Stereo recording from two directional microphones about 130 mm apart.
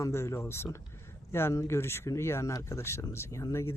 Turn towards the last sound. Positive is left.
turn(degrees=20)  # may be behind; listen again after turning